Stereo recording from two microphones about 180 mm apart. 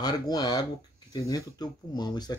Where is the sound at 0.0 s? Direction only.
20° left (ahead or behind).